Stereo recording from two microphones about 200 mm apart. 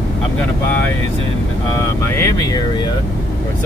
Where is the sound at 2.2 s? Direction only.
15° left (ahead or behind).